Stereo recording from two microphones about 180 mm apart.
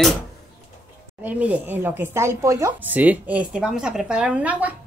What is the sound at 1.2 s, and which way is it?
Speech, 10° right (ahead or behind).